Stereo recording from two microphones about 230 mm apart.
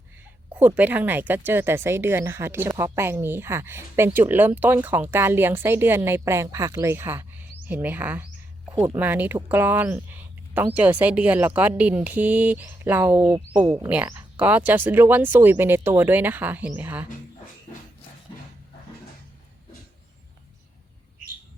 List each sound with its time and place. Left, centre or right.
0.5 s speech: centre
8.7 s speech: centre
9.0 s speech: centre